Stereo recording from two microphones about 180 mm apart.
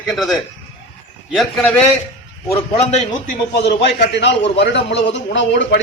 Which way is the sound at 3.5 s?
70° left (ahead or behind).